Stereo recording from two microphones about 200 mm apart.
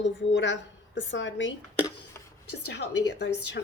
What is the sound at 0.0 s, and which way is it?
Speech, 60° left (ahead or behind).